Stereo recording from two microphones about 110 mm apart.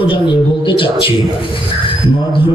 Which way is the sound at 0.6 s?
55° left (ahead or behind).